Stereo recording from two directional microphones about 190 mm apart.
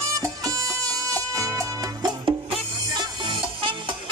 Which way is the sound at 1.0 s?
15° right (ahead or behind).